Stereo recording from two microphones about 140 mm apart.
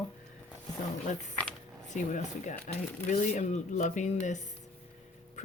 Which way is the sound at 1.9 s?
60° left (ahead or behind).